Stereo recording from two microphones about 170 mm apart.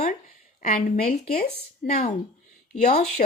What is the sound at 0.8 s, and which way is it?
Speech, 60° left (ahead or behind).